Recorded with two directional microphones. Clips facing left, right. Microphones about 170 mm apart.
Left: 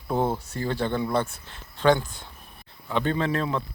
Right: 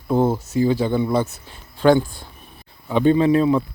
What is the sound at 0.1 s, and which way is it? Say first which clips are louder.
A man's voice: right 7 dB; 5° right (ahead or behind).